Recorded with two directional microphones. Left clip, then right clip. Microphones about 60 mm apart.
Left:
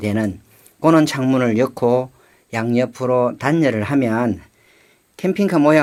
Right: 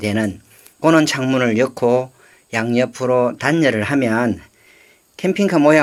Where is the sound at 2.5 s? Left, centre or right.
Left.